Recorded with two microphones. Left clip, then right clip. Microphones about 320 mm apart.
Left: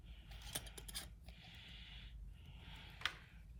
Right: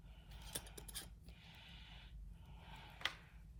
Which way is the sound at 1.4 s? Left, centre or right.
Centre.